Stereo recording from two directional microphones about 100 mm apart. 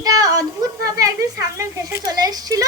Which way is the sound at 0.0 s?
35° right (ahead or behind).